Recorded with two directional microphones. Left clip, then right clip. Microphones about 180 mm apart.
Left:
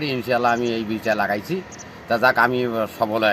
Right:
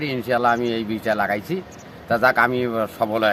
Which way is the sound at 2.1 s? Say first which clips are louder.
Even; 5° left (ahead or behind).